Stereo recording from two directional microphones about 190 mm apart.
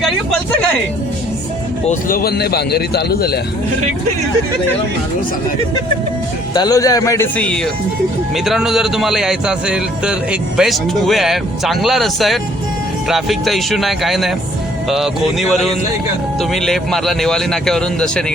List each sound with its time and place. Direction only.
1.9 s a man's voice: 50° left (ahead or behind)
6.5 s speech: 20° left (ahead or behind); by 18.3 s 5° left (ahead or behind)